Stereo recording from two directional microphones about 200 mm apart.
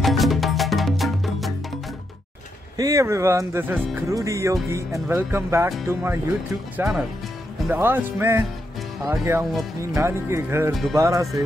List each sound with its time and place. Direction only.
0.0 s music: centre (ahead or behind)
2.8 s speech: 15° right (ahead or behind)
6.8 s music: 5° right (ahead or behind)
7.6 s speech: 10° right (ahead or behind)
10.7 s music: centre (ahead or behind)
11.0 s speech: 15° right (ahead or behind)